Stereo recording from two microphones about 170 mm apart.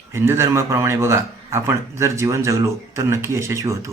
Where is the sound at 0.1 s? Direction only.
15° right (ahead or behind).